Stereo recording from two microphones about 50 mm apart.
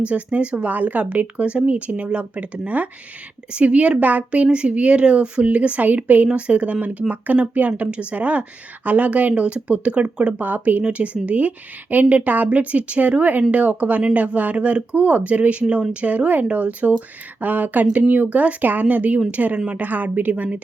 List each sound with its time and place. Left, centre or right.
0.1 s speech: right
10.4 s speech: right